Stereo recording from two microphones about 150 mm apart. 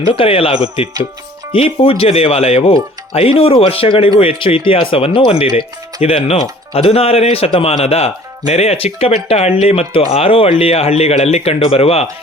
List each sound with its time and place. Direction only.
0.1 s speech: 35° left (ahead or behind)